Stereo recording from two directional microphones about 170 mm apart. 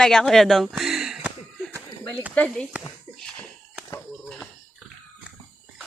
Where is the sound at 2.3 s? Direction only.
10° left (ahead or behind).